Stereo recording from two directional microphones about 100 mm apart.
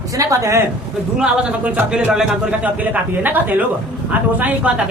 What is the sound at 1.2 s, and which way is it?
A man's voice, 10° right (ahead or behind).